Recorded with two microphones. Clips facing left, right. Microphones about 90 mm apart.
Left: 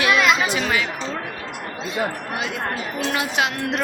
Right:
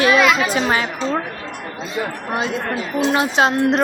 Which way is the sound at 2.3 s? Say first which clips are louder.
Right 4 dB; 35° right (ahead or behind).